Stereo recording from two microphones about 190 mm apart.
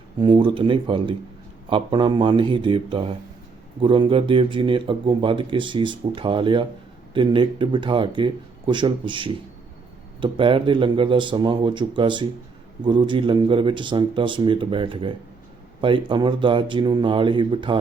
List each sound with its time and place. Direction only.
0.2 s speech: 25° right (ahead or behind)